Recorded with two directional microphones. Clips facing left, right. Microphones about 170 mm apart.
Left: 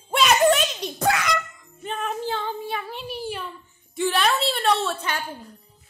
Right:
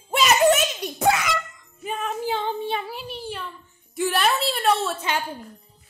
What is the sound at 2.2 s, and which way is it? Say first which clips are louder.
Female singing: right 3 dB; 20° right (ahead or behind).